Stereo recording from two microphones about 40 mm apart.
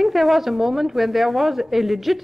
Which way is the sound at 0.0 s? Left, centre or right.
Centre.